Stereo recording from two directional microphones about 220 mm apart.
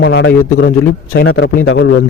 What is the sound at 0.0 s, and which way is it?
A man's voice, 55° left (ahead or behind).